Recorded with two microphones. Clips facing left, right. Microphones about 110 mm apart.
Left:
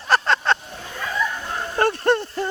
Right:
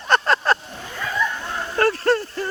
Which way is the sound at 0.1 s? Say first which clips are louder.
Right 1 dB; 5° right (ahead or behind).